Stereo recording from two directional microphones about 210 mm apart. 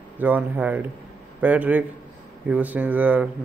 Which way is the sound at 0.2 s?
10° right (ahead or behind).